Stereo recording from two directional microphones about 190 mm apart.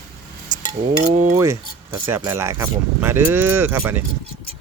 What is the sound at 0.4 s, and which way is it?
Chink, 20° right (ahead or behind).